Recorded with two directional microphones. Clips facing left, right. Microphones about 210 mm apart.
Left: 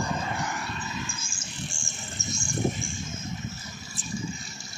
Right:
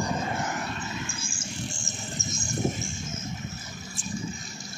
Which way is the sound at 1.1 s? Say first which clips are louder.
Right 4 dB; 30° right (ahead or behind).